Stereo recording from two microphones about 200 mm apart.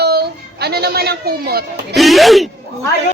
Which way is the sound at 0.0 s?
55° right (ahead or behind).